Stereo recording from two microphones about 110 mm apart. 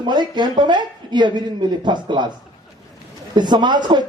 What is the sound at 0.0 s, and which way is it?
A man's voice, 40° right (ahead or behind).